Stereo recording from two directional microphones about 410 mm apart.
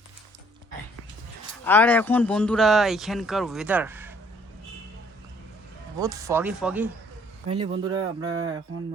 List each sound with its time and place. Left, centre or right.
1.6 s speech: centre
6.0 s speech: centre
7.4 s speech: right